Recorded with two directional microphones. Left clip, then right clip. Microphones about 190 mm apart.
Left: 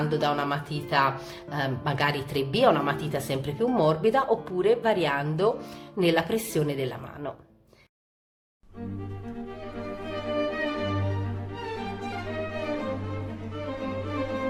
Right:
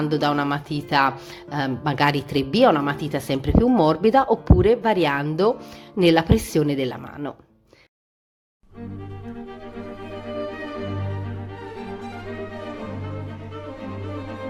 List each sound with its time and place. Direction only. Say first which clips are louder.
0.0 s speech: right 4 dB; 35° right (ahead or behind)
9.2 s music: right 2 dB; centre (ahead or behind)